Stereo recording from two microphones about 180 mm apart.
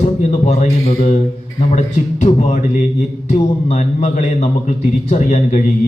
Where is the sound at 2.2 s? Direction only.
40° left (ahead or behind).